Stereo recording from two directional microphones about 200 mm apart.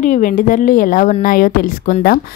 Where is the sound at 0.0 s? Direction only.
40° left (ahead or behind).